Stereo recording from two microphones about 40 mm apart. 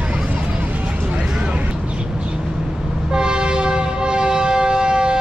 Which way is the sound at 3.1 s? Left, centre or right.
Right.